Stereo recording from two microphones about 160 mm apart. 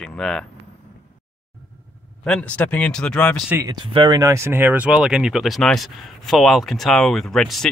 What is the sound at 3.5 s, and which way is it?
Speech, 15° right (ahead or behind).